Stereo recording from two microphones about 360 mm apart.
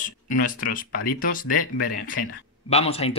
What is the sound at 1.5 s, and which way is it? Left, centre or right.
Speech, left.